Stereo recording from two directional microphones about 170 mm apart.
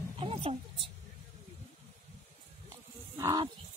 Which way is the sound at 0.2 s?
35° right (ahead or behind).